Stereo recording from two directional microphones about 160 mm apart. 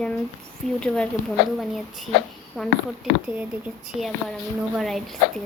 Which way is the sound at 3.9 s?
Centre (ahead or behind).